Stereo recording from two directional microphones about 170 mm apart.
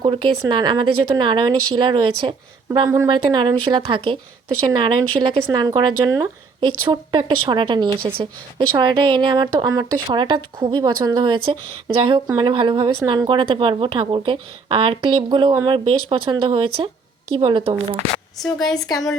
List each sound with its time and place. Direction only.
0.0 s a woman's voice: 30° right (ahead or behind)
18.4 s a woman's voice: 5° left (ahead or behind)